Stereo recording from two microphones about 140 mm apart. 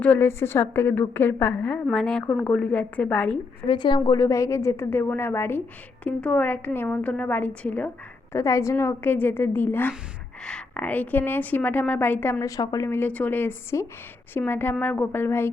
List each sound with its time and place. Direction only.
0.0 s a woman's voice: 15° left (ahead or behind)
3.7 s a woman's voice: 35° left (ahead or behind); by 7.9 s 10° left (ahead or behind)
8.3 s a woman's voice: 20° left (ahead or behind)